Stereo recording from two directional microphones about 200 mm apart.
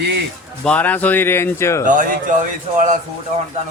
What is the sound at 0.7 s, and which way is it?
Speech, 5° left (ahead or behind).